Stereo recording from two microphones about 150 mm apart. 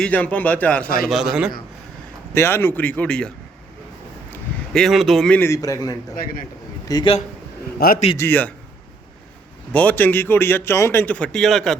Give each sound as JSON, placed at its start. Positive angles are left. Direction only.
{"t": 0.0, "sound": "a man's voice", "side_deg": 10}
{"t": 1.0, "sound": "a man's voice", "side_deg": -5}
{"t": 2.3, "sound": "a man's voice", "side_deg": 15}
{"t": 4.3, "sound": "a sound", "side_deg": 5}
{"t": 5.4, "sound": "a man's voice", "side_deg": 20}
{"t": 6.1, "sound": "a man's voice", "side_deg": 75}
{"t": 6.8, "sound": "a man's voice", "side_deg": 25}
{"t": 7.8, "sound": "a man's voice", "side_deg": 90}
{"t": 8.2, "sound": "a man's voice", "side_deg": 10}
{"t": 9.7, "sound": "a man's voice", "side_deg": 10}